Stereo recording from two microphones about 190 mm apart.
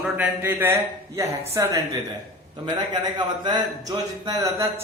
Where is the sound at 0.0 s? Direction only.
10° right (ahead or behind).